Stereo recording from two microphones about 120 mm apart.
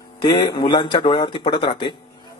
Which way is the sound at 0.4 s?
35° left (ahead or behind).